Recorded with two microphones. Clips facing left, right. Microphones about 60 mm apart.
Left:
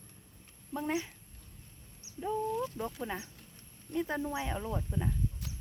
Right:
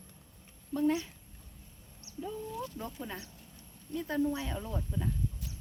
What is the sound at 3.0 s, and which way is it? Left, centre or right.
Speech, centre.